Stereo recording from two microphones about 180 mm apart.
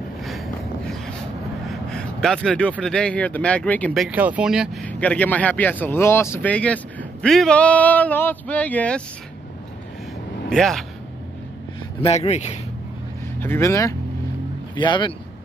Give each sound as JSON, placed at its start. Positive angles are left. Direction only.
{"t": 0.2, "sound": "a sound", "side_deg": 0}
{"t": 1.7, "sound": "vehicle", "side_deg": 5}
{"t": 2.8, "sound": "speech", "side_deg": 5}
{"t": 4.8, "sound": "speech", "side_deg": 5}
{"t": 10.5, "sound": "speech", "side_deg": 0}
{"t": 12.0, "sound": "speech", "side_deg": 35}
{"t": 13.4, "sound": "speech", "side_deg": 15}